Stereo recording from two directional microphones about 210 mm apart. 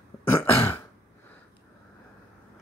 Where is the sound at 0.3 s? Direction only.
10° left (ahead or behind).